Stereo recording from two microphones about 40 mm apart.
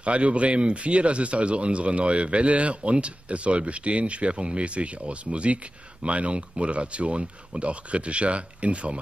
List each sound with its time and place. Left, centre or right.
0.0 s speech: right